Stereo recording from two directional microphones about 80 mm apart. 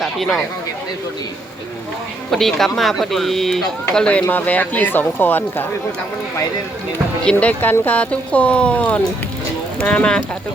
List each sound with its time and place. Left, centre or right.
0.0 s speech: centre
2.3 s speech: centre; by 5.6 s left
7.3 s speech: centre